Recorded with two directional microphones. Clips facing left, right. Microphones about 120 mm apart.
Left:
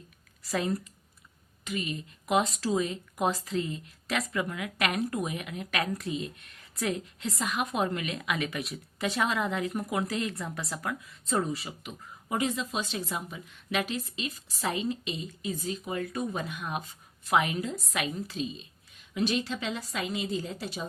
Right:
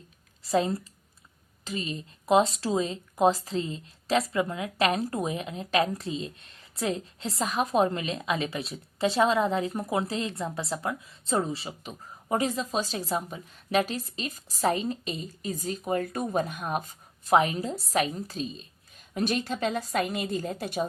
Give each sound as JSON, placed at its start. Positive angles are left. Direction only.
{"t": 0.4, "sound": "speech", "side_deg": -30}